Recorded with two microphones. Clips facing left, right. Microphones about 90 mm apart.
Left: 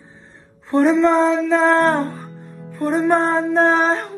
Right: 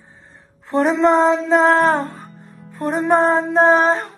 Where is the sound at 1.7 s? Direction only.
Centre (ahead or behind).